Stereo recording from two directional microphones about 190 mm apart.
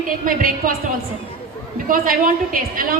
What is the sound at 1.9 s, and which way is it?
A woman's voice, 45° right (ahead or behind).